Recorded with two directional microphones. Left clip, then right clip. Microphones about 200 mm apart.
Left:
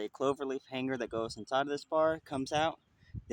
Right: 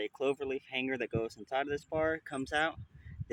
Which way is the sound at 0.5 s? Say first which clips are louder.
Right 2 dB; 45° left (ahead or behind).